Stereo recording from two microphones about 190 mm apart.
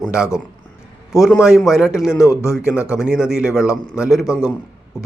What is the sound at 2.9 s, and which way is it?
Speech, 5° right (ahead or behind).